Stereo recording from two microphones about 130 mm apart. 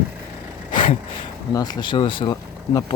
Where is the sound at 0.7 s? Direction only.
40° left (ahead or behind).